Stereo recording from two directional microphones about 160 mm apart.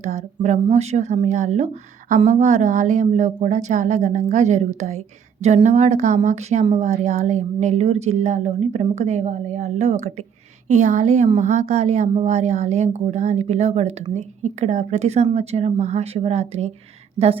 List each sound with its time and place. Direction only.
0.0 s speech: 45° right (ahead or behind)